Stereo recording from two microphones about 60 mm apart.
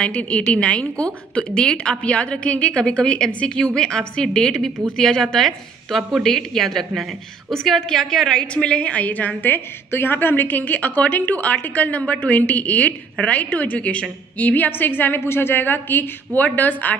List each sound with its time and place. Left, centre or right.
0.0 s a woman's voice: left